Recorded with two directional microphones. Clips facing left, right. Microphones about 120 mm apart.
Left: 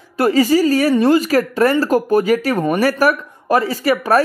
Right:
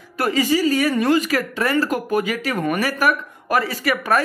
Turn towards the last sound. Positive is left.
turn(degrees=35)  # may be behind; listen again after turning